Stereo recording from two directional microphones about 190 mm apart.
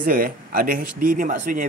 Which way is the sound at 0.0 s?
50° right (ahead or behind).